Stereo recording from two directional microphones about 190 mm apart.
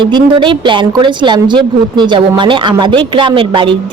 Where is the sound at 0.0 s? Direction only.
25° right (ahead or behind).